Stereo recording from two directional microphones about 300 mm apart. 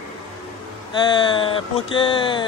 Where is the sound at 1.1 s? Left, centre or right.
Centre.